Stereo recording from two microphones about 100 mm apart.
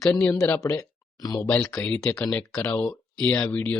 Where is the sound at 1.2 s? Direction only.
35° left (ahead or behind).